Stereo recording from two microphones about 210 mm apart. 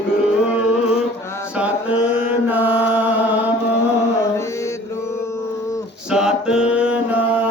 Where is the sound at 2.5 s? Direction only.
10° right (ahead or behind).